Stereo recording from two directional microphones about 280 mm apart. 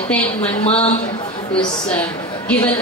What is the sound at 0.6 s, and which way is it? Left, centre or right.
Speech, left.